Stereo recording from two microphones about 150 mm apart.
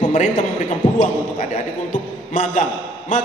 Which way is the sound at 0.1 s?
50° left (ahead or behind).